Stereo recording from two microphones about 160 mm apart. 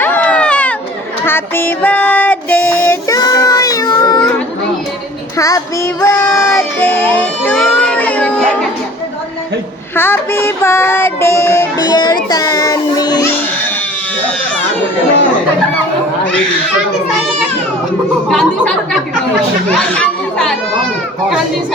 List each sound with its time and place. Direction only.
0.0 s a sound: 10° left (ahead or behind)
1.2 s child singing: 15° left (ahead or behind)
5.4 s child singing: 20° left (ahead or behind)
7.7 s a sound: 10° left (ahead or behind)
9.9 s music: 15° left (ahead or behind)
18.3 s speech: 5° left (ahead or behind)
19.9 s chatter: 5° left (ahead or behind)